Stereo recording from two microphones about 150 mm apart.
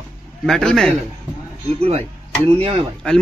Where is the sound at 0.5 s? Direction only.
5° left (ahead or behind).